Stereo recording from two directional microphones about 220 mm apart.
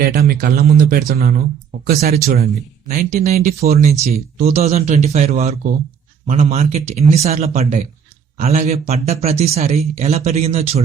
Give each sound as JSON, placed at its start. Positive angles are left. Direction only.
{"t": 0.0, "sound": "speech", "side_deg": -40}